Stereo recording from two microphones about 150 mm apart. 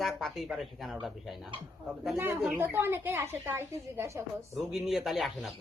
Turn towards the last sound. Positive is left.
turn(degrees=0)  # may be behind; listen again after turning